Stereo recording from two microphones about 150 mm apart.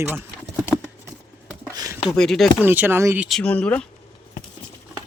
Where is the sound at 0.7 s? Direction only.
15° left (ahead or behind).